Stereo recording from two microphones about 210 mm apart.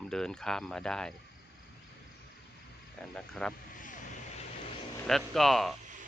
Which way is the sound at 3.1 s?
5° left (ahead or behind).